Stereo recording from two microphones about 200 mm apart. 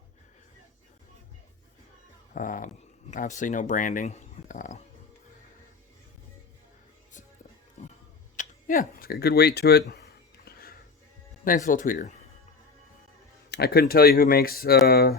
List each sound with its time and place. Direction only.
2.3 s speech: 40° left (ahead or behind)
7.8 s tick-tock: 35° left (ahead or behind)
8.4 s speech: 40° left (ahead or behind)
10.4 s music: 50° left (ahead or behind)
11.4 s speech: 40° left (ahead or behind)
13.5 s speech: 50° left (ahead or behind)